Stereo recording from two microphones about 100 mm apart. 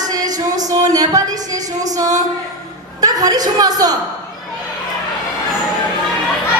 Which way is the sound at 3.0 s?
40° right (ahead or behind).